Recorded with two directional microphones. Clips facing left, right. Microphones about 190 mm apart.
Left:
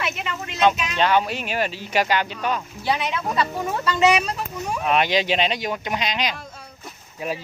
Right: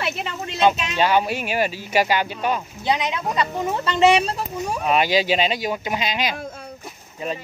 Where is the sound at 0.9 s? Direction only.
10° right (ahead or behind); by 4.4 s 30° right (ahead or behind).